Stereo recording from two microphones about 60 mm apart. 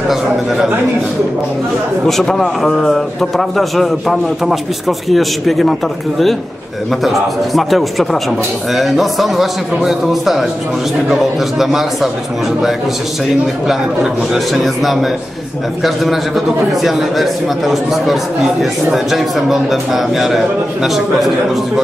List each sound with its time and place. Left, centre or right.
2.0 s a man's voice: centre
14.3 s a man's voice: centre